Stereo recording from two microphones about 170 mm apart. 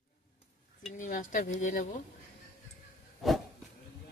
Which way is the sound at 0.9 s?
50° left (ahead or behind).